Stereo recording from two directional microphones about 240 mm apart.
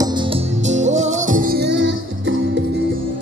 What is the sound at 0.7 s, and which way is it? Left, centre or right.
Music, right.